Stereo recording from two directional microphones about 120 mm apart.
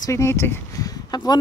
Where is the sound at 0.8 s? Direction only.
35° left (ahead or behind).